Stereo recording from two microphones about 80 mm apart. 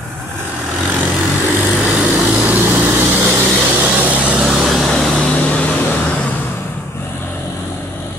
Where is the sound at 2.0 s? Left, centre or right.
Centre.